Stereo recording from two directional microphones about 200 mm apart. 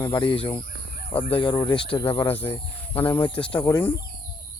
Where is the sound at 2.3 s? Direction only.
10° left (ahead or behind).